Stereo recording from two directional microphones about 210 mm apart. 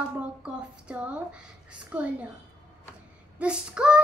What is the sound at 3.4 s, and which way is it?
Child singing, 5° right (ahead or behind).